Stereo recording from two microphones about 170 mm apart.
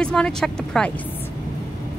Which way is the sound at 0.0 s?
5° left (ahead or behind).